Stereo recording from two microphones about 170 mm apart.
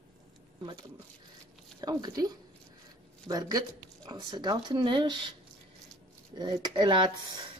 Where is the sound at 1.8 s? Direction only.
25° right (ahead or behind).